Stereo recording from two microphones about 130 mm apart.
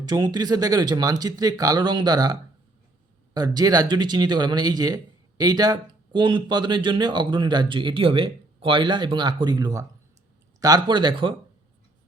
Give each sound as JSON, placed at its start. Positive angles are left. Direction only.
{"t": 0.0, "sound": "speech", "side_deg": -30}